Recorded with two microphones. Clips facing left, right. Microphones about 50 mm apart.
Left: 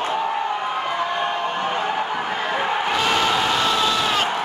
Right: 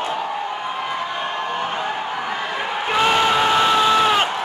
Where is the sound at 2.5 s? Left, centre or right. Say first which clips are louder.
Left 3 dB; centre.